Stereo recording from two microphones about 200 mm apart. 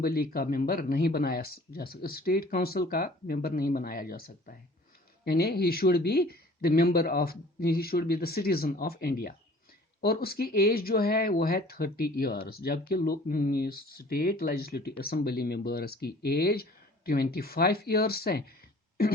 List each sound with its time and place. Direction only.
0.0 s speech: 50° left (ahead or behind)